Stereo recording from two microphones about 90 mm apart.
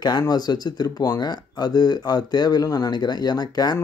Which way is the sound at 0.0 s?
50° left (ahead or behind).